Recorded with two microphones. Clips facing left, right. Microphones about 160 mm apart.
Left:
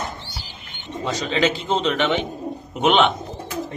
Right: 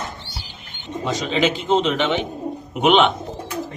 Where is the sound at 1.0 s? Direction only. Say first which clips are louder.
Right 1 dB; 15° right (ahead or behind).